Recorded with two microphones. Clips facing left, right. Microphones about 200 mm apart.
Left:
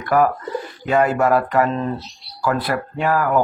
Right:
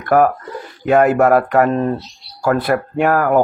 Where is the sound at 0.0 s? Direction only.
50° right (ahead or behind).